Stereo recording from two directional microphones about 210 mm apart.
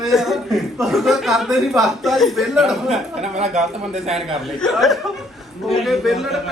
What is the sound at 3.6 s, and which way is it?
A man's voice, centre (ahead or behind).